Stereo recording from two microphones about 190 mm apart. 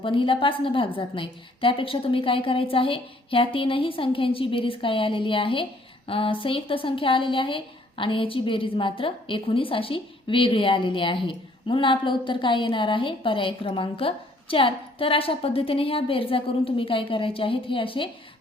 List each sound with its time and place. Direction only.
0.0 s a woman's voice: 25° left (ahead or behind)